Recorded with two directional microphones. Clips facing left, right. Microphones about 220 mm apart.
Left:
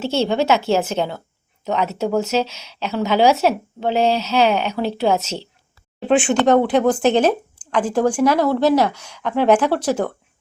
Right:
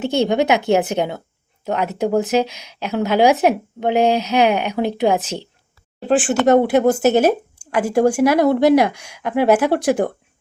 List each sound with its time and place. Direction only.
0.0 s speech: 15° right (ahead or behind)
6.1 s speech: centre (ahead or behind)